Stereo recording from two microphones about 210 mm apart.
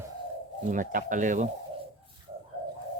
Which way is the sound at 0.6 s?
40° right (ahead or behind).